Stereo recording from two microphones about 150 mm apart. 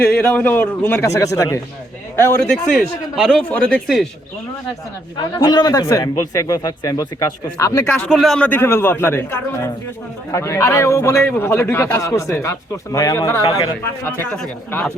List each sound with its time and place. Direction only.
0.0 s a man's voice: 10° left (ahead or behind)
2.7 s speech: centre (ahead or behind)
5.1 s a man's voice: 30° left (ahead or behind)
7.9 s a man's voice: 10° left (ahead or behind)
10.3 s a man's voice: 20° left (ahead or behind)